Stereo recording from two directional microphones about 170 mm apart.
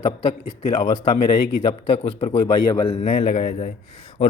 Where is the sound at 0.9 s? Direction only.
25° left (ahead or behind).